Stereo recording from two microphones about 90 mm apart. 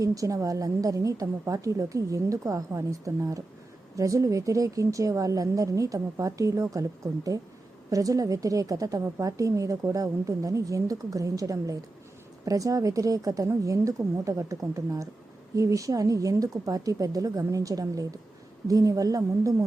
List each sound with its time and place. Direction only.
0.0 s speech: 40° right (ahead or behind)